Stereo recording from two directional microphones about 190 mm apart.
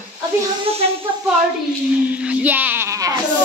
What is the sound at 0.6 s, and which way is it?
Speech, 30° right (ahead or behind).